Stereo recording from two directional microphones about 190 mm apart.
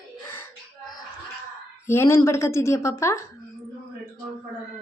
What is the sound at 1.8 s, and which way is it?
A woman's voice, 15° left (ahead or behind).